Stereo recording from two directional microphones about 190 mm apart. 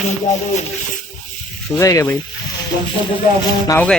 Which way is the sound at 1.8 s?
15° left (ahead or behind).